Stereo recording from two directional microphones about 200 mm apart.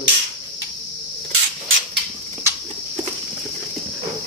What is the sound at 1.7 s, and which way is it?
Mechanisms, 75° right (ahead or behind).